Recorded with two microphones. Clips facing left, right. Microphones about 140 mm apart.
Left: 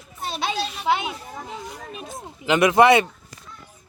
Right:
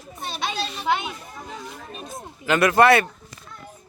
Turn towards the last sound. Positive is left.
turn(degrees=15)  # may be behind; listen again after turning